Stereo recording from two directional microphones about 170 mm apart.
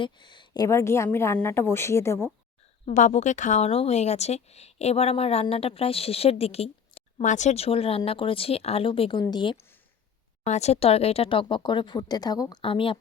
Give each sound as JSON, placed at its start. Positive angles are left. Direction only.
{"t": 0.0, "sound": "a woman's voice", "side_deg": 25}
{"t": 2.8, "sound": "a woman's voice", "side_deg": 45}
{"t": 10.4, "sound": "a woman's voice", "side_deg": 40}